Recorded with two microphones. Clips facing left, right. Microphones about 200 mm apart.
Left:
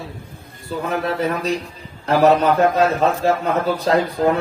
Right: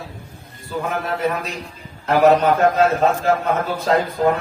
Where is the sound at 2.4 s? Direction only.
35° left (ahead or behind).